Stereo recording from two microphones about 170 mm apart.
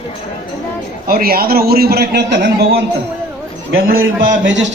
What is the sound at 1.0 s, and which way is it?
A man's voice, 60° right (ahead or behind).